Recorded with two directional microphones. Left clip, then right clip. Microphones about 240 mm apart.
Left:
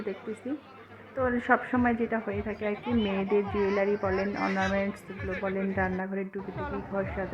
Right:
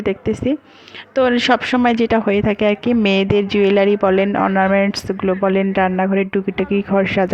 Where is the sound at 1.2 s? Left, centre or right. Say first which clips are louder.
Right 12 dB; right.